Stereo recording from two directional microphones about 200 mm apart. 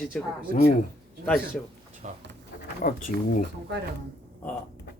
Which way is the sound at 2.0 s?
35° right (ahead or behind).